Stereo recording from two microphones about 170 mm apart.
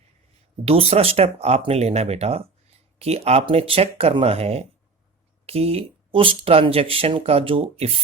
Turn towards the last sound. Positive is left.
turn(degrees=-35)  # may be behind; listen again after turning